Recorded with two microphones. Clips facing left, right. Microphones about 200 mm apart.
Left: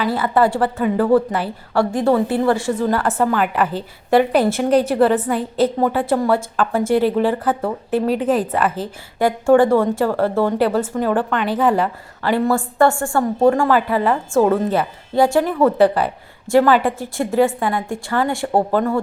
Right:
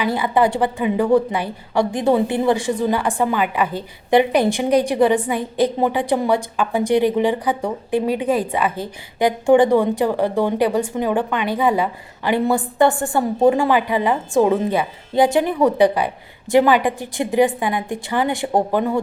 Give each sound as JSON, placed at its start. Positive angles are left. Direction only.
{"t": 0.0, "sound": "speech", "side_deg": -15}
{"t": 4.4, "sound": "a woman's voice", "side_deg": 0}
{"t": 4.7, "sound": "speech", "side_deg": -15}
{"t": 13.1, "sound": "a woman's voice", "side_deg": -5}
{"t": 13.7, "sound": "speech", "side_deg": -15}